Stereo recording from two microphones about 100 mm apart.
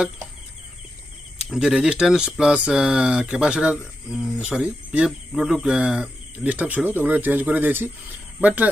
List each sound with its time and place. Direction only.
1.4 s speech: 5° right (ahead or behind)